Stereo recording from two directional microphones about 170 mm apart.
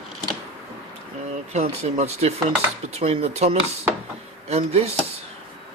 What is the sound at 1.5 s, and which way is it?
Speech, 40° right (ahead or behind).